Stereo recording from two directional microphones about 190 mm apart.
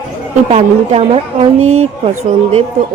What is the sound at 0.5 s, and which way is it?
A woman's voice, 30° right (ahead or behind).